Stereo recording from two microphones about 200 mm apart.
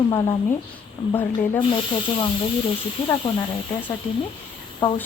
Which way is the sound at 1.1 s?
10° left (ahead or behind).